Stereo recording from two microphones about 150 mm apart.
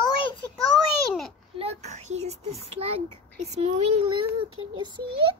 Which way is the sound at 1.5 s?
40° right (ahead or behind).